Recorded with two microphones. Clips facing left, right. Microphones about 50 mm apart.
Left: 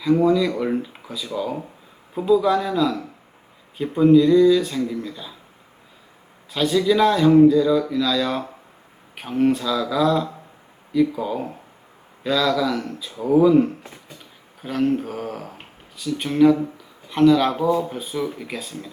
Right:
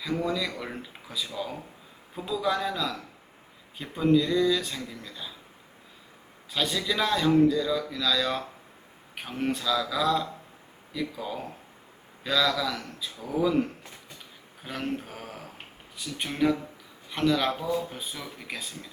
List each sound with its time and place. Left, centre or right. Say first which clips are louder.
0.3 s speech: left 11 dB; centre
6.5 s speech: left 10 dB; centre
13.1 s speech: left 14 dB; left
13.4 s speech: left 7 dB; centre
15.1 s speech: left 11 dB; centre
16.0 s speech: left 10 dB; centre
17.5 s speech: left 9 dB; centre